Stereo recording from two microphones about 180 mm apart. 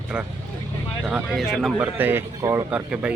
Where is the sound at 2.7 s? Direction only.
5° right (ahead or behind).